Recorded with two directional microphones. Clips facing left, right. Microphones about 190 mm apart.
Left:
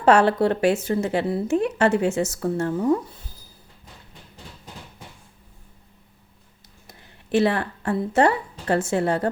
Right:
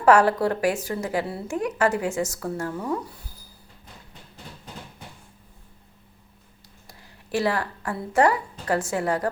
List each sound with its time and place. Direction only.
0.0 s a woman's voice: 25° left (ahead or behind)
6.8 s speech: 25° left (ahead or behind)